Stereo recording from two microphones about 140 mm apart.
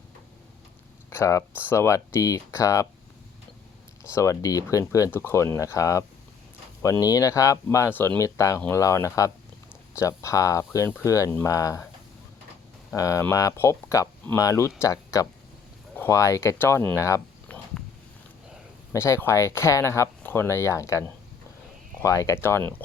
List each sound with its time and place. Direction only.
1.1 s speech: 20° left (ahead or behind)
4.1 s speech: 20° left (ahead or behind)
13.0 s speech: 25° left (ahead or behind)
17.5 s a sound: 10° left (ahead or behind)
18.9 s speech: 20° left (ahead or behind)
22.0 s speech: 25° left (ahead or behind)